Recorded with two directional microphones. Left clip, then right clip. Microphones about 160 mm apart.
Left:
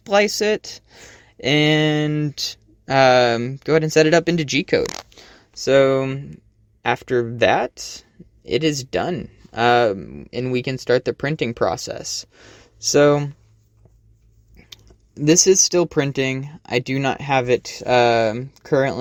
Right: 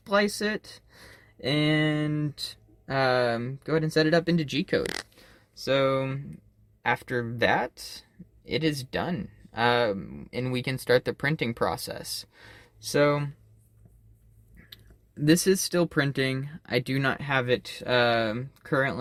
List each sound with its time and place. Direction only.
0.0 s speech: 55° left (ahead or behind)
5.5 s speech: 35° left (ahead or behind)
14.7 s speech: 30° left (ahead or behind)